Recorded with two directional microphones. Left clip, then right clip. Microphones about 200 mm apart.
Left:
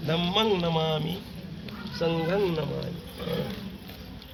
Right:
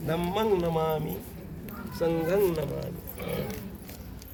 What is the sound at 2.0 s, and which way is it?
Speech, 25° left (ahead or behind).